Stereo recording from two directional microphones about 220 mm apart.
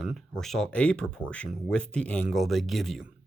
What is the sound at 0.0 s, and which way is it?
Speech, centre (ahead or behind).